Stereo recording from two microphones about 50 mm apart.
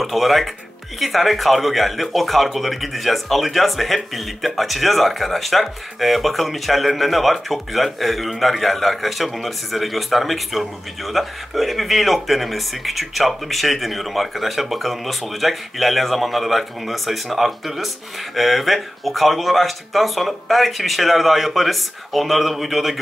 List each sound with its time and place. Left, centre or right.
0.0 s speech: centre